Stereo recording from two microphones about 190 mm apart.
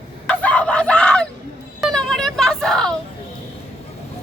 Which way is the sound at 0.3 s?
5° left (ahead or behind).